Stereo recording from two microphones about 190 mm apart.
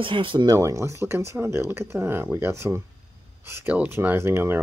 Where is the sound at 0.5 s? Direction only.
15° right (ahead or behind).